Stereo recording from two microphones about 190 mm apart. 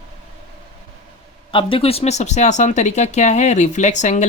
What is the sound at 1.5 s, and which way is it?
Speech, 25° left (ahead or behind).